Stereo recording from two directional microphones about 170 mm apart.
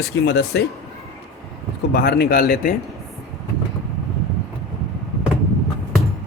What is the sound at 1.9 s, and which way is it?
Speech, 65° left (ahead or behind).